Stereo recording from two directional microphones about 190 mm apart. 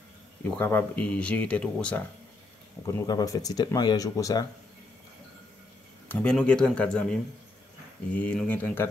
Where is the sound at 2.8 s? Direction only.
20° left (ahead or behind).